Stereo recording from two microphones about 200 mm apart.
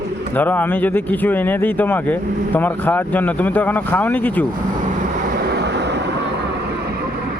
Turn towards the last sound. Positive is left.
turn(degrees=-55)  # may be behind; listen again after turning